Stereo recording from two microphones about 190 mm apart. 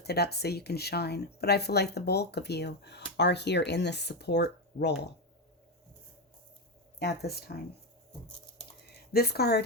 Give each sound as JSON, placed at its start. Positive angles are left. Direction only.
{"t": 0.0, "sound": "speech", "side_deg": 60}
{"t": 7.0, "sound": "speech", "side_deg": 55}
{"t": 9.1, "sound": "speech", "side_deg": 55}